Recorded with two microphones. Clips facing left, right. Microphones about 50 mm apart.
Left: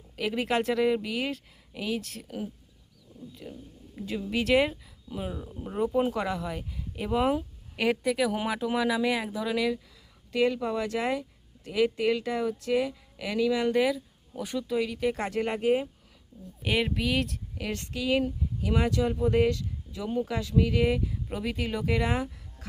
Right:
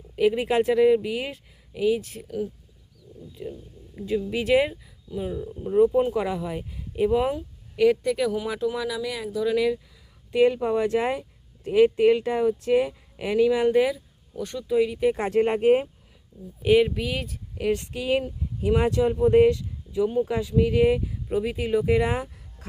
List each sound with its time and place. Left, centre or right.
0.2 s speech: centre
3.9 s speech: centre
5.1 s speech: centre
7.3 s a woman's voice: centre
9.4 s speech: centre
10.3 s speech: right
13.7 s speech: centre
14.3 s speech: centre
14.7 s speech: centre; by 15.9 s right
16.6 s speech: centre
17.7 s speech: right